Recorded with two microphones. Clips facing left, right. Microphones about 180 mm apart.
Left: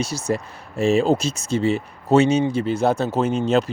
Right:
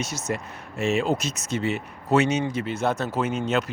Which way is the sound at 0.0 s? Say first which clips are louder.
Left 5 dB; 35° left (ahead or behind).